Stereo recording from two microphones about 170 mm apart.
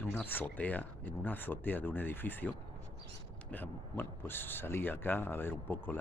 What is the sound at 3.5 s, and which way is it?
Speech, 10° left (ahead or behind).